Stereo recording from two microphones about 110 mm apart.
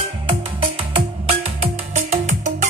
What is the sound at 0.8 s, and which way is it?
Music, 65° right (ahead or behind).